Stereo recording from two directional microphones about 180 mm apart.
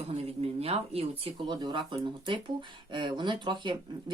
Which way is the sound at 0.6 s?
35° right (ahead or behind).